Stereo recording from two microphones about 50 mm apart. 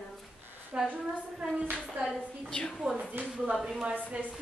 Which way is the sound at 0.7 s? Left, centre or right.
Right.